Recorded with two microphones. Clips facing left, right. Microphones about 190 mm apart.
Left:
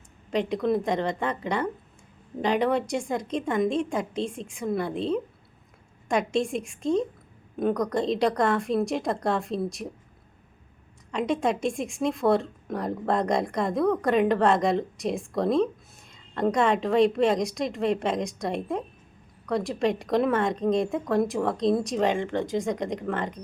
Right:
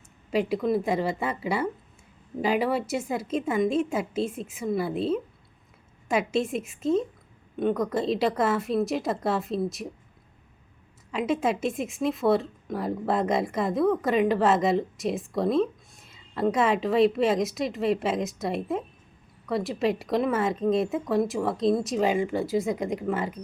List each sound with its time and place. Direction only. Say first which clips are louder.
0.3 s a woman's voice: even; 5° right (ahead or behind)
11.1 s a woman's voice: even; 5° right (ahead or behind)